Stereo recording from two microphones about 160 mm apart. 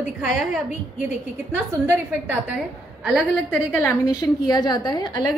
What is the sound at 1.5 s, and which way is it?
Speech, 15° right (ahead or behind).